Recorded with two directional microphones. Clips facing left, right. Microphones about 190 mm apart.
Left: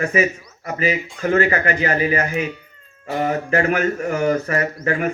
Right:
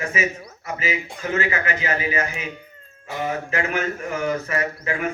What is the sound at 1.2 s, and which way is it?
Speech, 45° left (ahead or behind).